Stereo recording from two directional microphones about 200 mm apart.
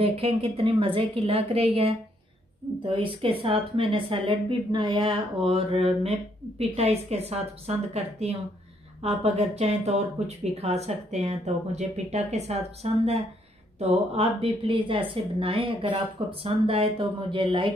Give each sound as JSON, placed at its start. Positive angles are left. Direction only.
{"t": 0.0, "sound": "a woman's voice", "side_deg": -30}